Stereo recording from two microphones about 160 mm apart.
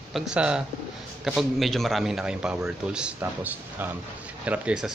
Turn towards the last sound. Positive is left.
turn(degrees=-10)  # may be behind; listen again after turning